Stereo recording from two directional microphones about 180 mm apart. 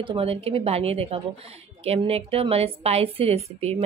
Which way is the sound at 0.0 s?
30° right (ahead or behind).